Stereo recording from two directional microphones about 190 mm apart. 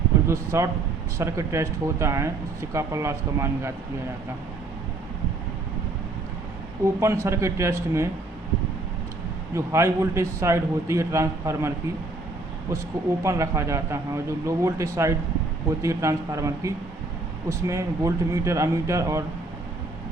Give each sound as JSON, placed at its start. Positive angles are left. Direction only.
{"t": 0.3, "sound": "speech", "side_deg": -15}
{"t": 6.8, "sound": "speech", "side_deg": -15}
{"t": 9.6, "sound": "speech", "side_deg": -15}
{"t": 13.2, "sound": "speech", "side_deg": -15}